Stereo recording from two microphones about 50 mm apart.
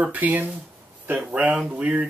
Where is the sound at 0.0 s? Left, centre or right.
Right.